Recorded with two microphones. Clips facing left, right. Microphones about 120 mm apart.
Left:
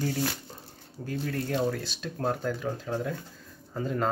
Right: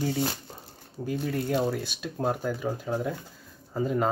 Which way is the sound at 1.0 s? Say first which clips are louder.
Right 3 dB; 15° right (ahead or behind).